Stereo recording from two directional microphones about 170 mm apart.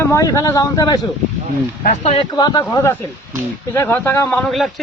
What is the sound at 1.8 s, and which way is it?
Speech, 45° left (ahead or behind).